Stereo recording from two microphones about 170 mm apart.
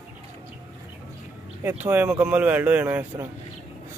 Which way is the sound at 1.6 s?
10° right (ahead or behind).